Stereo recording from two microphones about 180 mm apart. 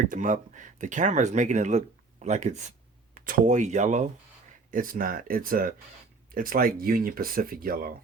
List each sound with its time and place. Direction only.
0.0 s speech: 45° right (ahead or behind)